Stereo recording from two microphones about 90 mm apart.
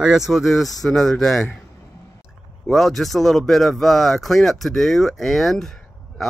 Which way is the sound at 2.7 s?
Centre (ahead or behind).